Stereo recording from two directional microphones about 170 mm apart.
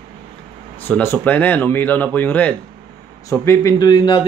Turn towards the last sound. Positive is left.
turn(degrees=25)  # may be behind; listen again after turning